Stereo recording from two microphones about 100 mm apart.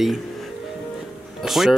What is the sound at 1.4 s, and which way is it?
Speech, centre (ahead or behind).